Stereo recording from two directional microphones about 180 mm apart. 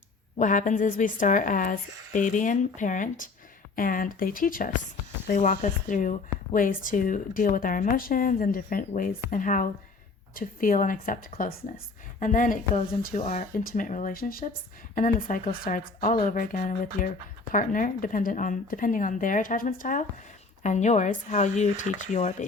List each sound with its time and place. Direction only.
0.3 s speech: 45° left (ahead or behind)
13.2 s speech: 40° left (ahead or behind)